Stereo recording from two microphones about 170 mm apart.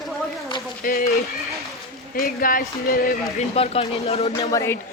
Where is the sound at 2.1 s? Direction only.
60° left (ahead or behind).